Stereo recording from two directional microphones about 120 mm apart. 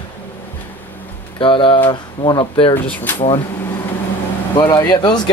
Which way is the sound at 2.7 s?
15° left (ahead or behind).